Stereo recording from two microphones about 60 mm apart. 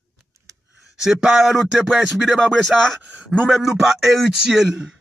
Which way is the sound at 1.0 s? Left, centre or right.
Centre.